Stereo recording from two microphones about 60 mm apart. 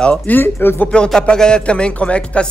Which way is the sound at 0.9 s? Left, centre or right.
Centre.